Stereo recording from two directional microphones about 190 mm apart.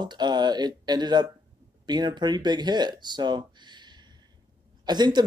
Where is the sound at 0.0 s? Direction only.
25° right (ahead or behind).